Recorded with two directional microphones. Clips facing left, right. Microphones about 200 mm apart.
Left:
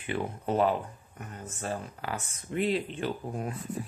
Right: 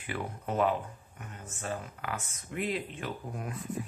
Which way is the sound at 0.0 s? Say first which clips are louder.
Left 4 dB; 25° left (ahead or behind).